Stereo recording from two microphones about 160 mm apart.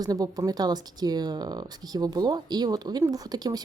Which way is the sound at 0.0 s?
25° right (ahead or behind).